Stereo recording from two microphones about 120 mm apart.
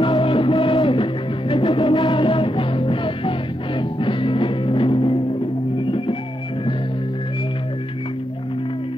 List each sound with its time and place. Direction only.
0.0 s music: 45° left (ahead or behind)